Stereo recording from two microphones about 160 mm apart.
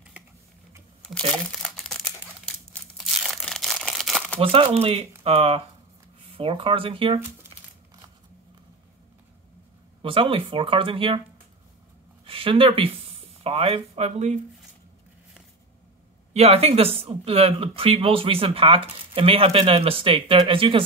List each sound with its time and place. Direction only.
1.3 s crumpling: 5° left (ahead or behind)
4.4 s speech: 35° right (ahead or behind)
10.0 s speech: 35° right (ahead or behind)
12.3 s speech: 35° right (ahead or behind)
16.3 s speech: 40° right (ahead or behind)